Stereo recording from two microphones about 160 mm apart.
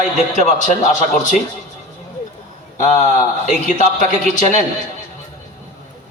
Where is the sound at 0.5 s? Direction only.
50° left (ahead or behind).